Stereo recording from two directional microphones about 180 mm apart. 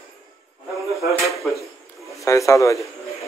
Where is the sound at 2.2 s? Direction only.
15° left (ahead or behind).